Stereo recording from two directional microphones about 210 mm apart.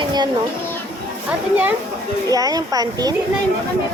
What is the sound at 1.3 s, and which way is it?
Speech, 10° right (ahead or behind).